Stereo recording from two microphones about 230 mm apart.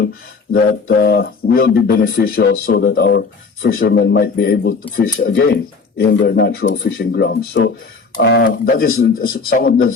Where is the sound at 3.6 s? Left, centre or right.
Left.